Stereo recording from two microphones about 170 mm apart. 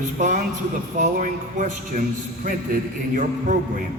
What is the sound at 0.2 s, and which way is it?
A man's voice, 45° right (ahead or behind).